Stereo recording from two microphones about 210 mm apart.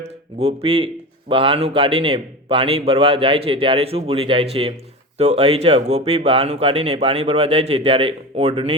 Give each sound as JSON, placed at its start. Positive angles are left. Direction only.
{"t": 0.0, "sound": "speech", "side_deg": -30}